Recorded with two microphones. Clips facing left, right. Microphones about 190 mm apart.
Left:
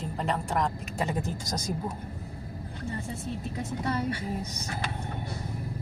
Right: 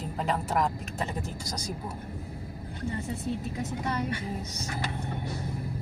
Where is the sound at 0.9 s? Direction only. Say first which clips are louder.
Left 3 dB; 20° left (ahead or behind).